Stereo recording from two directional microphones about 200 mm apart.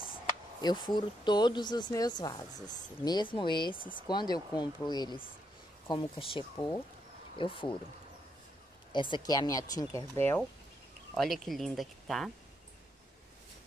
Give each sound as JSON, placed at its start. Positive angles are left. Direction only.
{"t": 0.1, "sound": "speech", "side_deg": 20}
{"t": 8.9, "sound": "speech", "side_deg": 25}
{"t": 11.1, "sound": "speech", "side_deg": 0}